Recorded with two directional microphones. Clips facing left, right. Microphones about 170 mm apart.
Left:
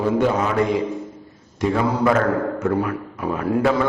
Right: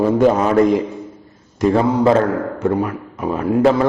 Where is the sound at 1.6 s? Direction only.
35° right (ahead or behind).